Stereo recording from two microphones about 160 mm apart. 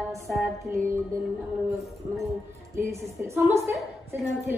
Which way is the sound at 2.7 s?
20° right (ahead or behind).